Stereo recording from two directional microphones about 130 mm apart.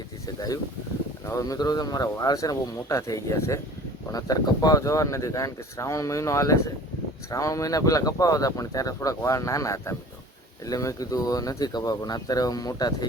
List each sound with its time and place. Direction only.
0.3 s speech: 30° left (ahead or behind)